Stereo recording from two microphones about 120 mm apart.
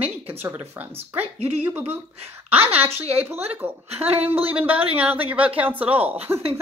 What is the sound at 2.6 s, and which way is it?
Speech, 55° right (ahead or behind).